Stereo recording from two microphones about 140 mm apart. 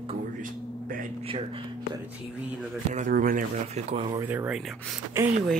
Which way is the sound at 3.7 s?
40° right (ahead or behind).